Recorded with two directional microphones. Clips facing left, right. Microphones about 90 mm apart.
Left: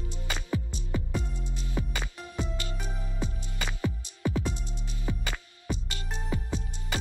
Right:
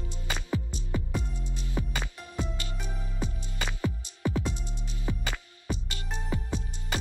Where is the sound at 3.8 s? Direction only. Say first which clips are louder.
Even; 20° right (ahead or behind).